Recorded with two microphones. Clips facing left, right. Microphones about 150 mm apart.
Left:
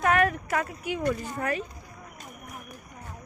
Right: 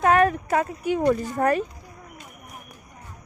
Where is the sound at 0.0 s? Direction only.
30° right (ahead or behind).